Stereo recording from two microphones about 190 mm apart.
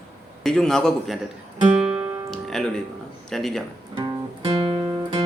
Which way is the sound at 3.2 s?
Centre (ahead or behind).